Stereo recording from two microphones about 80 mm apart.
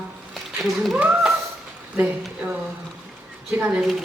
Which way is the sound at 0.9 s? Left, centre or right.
Centre.